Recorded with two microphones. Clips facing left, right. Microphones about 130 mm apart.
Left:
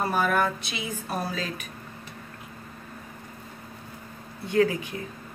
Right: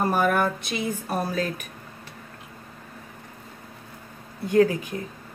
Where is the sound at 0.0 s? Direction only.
50° right (ahead or behind).